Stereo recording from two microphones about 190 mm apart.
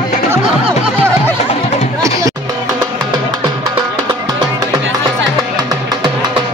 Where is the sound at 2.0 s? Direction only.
15° right (ahead or behind).